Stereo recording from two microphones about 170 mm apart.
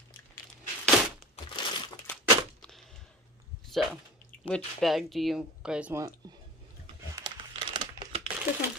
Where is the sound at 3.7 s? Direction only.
Centre (ahead or behind).